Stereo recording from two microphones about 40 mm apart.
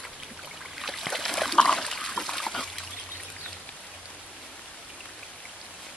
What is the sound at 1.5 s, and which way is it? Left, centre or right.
Trickle, centre.